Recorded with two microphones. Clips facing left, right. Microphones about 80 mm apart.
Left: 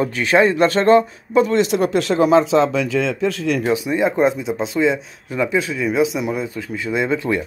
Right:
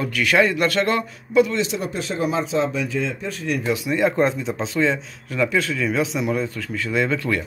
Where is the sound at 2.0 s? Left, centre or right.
Left.